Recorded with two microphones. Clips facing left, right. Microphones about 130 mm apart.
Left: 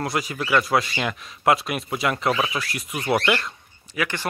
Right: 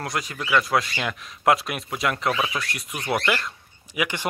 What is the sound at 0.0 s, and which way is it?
Speech, 5° left (ahead or behind).